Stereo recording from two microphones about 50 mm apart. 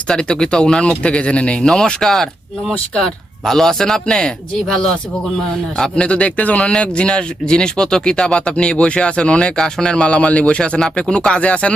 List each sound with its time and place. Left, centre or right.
0.1 s speech: centre